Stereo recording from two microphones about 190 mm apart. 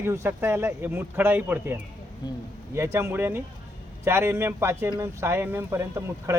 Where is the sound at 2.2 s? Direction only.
20° left (ahead or behind).